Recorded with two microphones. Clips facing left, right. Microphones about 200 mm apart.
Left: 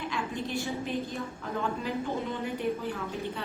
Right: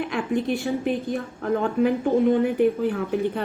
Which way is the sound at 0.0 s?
55° right (ahead or behind).